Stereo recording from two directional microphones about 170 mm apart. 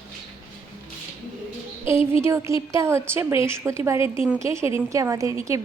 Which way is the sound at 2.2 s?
15° right (ahead or behind).